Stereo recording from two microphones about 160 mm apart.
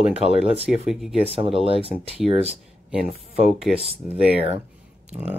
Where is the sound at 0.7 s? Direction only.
Centre (ahead or behind).